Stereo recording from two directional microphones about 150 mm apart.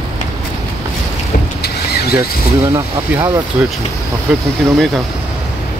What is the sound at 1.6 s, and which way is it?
Vehicle, 90° left.